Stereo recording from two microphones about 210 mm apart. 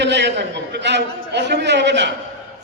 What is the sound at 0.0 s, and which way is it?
A man's voice, 55° right (ahead or behind).